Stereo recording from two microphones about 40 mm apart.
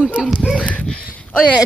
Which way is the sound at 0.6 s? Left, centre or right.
Left.